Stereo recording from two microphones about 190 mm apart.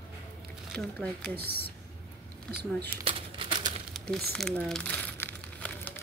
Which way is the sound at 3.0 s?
25° right (ahead or behind).